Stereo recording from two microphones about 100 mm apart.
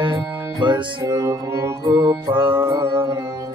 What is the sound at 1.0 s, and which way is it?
Music, 35° right (ahead or behind).